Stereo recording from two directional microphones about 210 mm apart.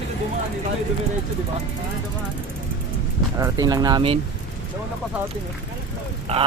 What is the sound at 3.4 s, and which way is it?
Speech, 20° right (ahead or behind).